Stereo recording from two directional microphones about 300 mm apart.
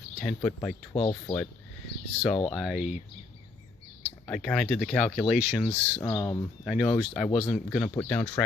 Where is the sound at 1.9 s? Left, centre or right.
Left.